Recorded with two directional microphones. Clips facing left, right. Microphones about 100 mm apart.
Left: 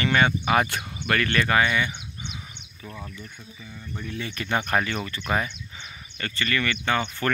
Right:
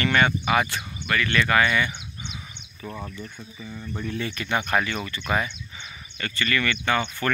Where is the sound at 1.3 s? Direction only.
25° left (ahead or behind).